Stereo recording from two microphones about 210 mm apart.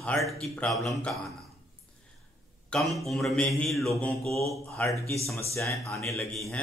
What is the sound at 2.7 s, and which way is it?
Speech, centre (ahead or behind).